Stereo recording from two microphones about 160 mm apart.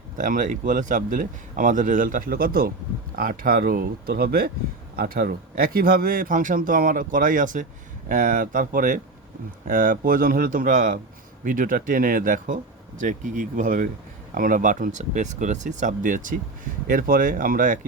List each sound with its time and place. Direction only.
0.2 s a man's voice: 55° right (ahead or behind)